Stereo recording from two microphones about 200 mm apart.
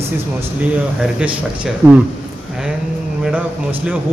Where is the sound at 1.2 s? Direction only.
5° right (ahead or behind).